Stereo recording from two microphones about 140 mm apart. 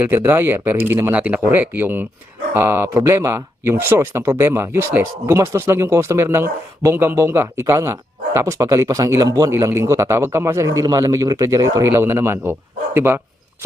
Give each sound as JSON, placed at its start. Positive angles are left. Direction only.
{"t": 0.0, "sound": "speech", "side_deg": -15}